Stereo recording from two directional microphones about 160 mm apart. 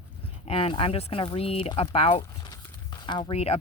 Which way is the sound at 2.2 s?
20° left (ahead or behind).